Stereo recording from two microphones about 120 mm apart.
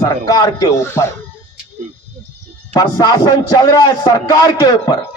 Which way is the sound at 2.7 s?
35° left (ahead or behind).